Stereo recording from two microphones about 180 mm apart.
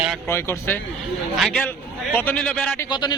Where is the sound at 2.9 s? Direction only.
25° left (ahead or behind).